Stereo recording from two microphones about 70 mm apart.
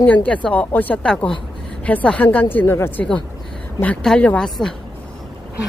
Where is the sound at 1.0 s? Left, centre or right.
Centre; by 3.0 s left.